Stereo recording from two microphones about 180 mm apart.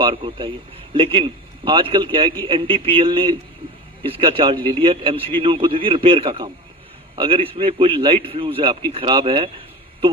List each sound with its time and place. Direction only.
0.0 s a man's voice: 30° right (ahead or behind)